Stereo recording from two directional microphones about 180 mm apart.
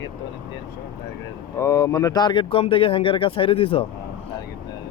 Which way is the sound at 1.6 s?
20° left (ahead or behind).